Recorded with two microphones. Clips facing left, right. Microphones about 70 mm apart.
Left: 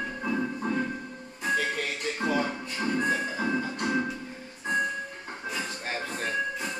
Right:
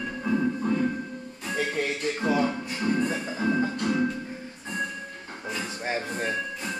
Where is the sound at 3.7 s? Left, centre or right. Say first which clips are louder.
Right 2 dB; left.